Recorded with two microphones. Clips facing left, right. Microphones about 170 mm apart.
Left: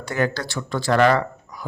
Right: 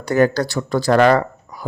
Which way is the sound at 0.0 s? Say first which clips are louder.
Right 8 dB; 40° right (ahead or behind).